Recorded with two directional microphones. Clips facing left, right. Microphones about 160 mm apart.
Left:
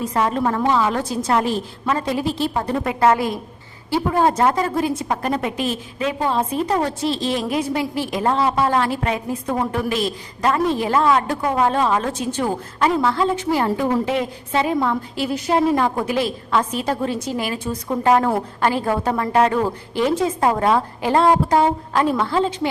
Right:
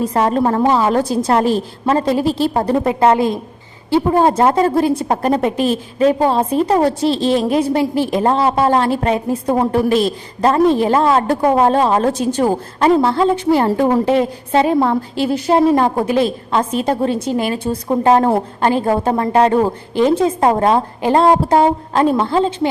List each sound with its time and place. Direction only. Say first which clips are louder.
0.0 s a woman's voice: right 5 dB; 35° right (ahead or behind)
13.7 s a woman's voice: right 6 dB; 45° right (ahead or behind); by 22.7 s 25° right (ahead or behind)